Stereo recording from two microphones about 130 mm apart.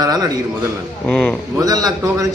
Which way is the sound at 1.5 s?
30° right (ahead or behind).